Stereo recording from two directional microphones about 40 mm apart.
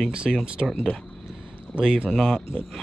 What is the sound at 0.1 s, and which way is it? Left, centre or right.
Speech, right.